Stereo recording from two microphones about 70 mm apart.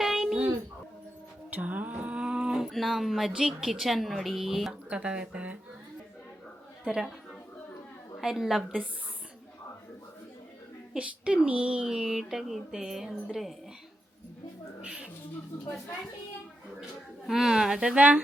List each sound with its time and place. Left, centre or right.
0.0 s a sound: centre
1.5 s a sound: right
2.6 s speech: centre
4.7 s speech: centre
6.8 s speech: centre
8.2 s speech: centre
10.9 s speech: centre
14.8 s a woman's voice: centre
17.2 s speech: centre